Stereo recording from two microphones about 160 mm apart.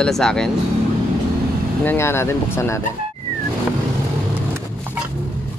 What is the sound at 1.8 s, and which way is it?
Speech, 15° left (ahead or behind).